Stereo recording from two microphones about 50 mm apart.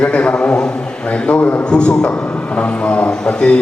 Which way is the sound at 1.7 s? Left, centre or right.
Centre.